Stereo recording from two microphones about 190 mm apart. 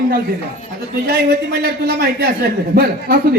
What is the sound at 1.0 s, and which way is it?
A man's voice, 55° right (ahead or behind).